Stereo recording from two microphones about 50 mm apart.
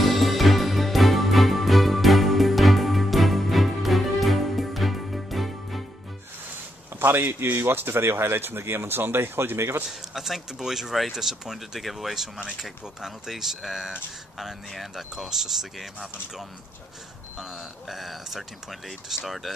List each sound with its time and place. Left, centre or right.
0.0 s music: centre
7.0 s speech: right
9.8 s speech: centre